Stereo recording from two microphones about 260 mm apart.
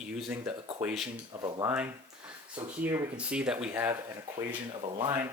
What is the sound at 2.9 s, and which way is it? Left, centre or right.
Speech, centre.